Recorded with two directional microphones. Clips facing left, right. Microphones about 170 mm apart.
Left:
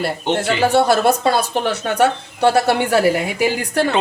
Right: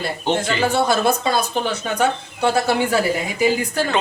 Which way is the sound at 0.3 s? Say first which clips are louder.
Left 5 dB; 70° left (ahead or behind).